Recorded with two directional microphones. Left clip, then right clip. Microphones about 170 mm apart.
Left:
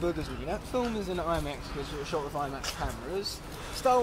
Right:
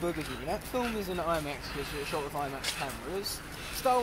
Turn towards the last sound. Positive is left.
turn(degrees=35)  # may be behind; listen again after turning